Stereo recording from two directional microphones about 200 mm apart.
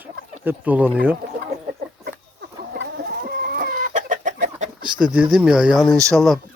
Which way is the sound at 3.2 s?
50° right (ahead or behind).